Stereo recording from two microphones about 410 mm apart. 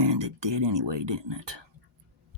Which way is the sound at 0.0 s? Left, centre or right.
Right.